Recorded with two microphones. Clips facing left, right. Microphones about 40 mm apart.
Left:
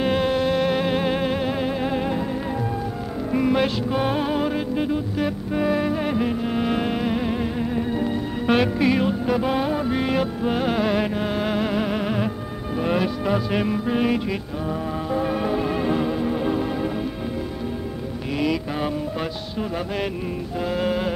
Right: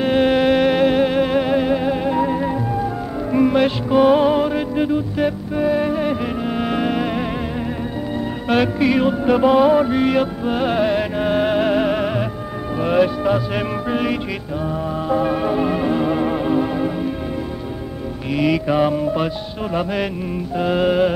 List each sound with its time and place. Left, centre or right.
0.2 s music: right
0.7 s music: centre
2.1 s music: centre
5.5 s music: centre
8.5 s music: centre
11.2 s music: right
16.1 s music: right
16.3 s music: centre
18.3 s music: centre
20.5 s music: right